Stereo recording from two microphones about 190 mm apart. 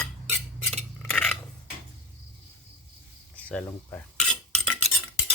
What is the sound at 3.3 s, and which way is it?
Speech, 5° left (ahead or behind).